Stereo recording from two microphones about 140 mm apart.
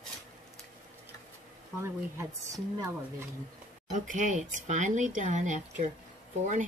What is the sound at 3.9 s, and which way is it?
Speech, 65° right (ahead or behind).